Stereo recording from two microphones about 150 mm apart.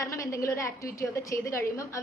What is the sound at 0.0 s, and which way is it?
A woman's voice, 20° left (ahead or behind).